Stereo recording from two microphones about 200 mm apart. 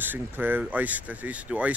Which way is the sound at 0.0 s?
10° right (ahead or behind).